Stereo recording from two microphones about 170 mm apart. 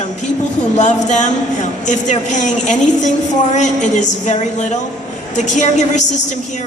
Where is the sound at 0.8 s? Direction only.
45° left (ahead or behind).